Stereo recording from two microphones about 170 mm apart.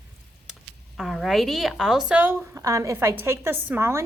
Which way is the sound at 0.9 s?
Centre (ahead or behind).